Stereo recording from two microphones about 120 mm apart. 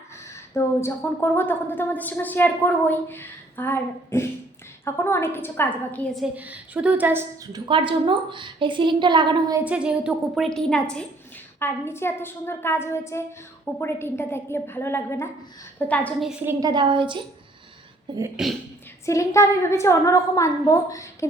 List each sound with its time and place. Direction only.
0.5 s a woman's voice: 20° left (ahead or behind)
6.3 s a woman's voice: 10° right (ahead or behind)
7.5 s a woman's voice: 45° right (ahead or behind)
9.6 s a woman's voice: 10° right (ahead or behind)
11.6 s a woman's voice: 20° left (ahead or behind)
16.5 s a woman's voice: 30° right (ahead or behind)
19.0 s a woman's voice: 25° left (ahead or behind)